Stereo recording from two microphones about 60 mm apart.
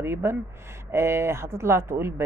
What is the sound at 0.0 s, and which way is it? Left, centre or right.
Speech, right.